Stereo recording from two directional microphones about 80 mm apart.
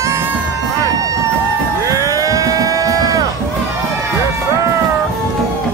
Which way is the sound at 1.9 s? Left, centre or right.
Right.